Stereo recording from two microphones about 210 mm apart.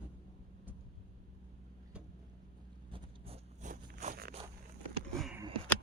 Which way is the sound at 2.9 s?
30° right (ahead or behind).